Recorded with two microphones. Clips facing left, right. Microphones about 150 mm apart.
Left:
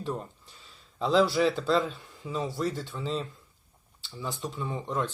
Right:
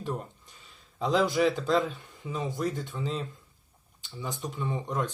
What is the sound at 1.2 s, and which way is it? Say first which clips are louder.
Speech: even; 15° right (ahead or behind).